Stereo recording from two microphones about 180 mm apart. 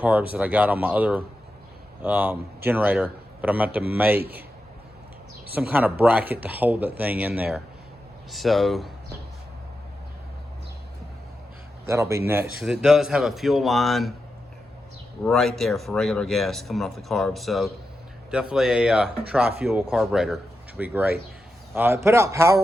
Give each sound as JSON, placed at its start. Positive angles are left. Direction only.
{"t": 0.0, "sound": "a man's voice", "side_deg": -10}
{"t": 4.2, "sound": "a man's voice", "side_deg": -60}
{"t": 5.5, "sound": "speech", "side_deg": -10}
{"t": 11.9, "sound": "speech", "side_deg": -15}
{"t": 15.2, "sound": "speech", "side_deg": 0}